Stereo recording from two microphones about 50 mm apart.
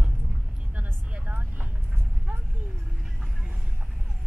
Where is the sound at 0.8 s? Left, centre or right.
Right.